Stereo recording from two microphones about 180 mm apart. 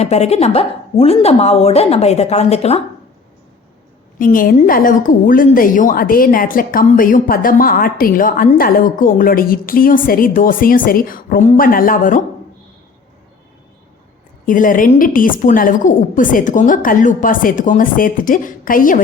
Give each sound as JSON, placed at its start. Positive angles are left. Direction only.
{"t": 0.0, "sound": "a woman's voice", "side_deg": 35}
{"t": 4.2, "sound": "a woman's voice", "side_deg": 50}
{"t": 14.4, "sound": "a woman's voice", "side_deg": 50}